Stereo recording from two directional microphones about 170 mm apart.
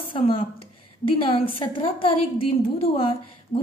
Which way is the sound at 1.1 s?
30° left (ahead or behind).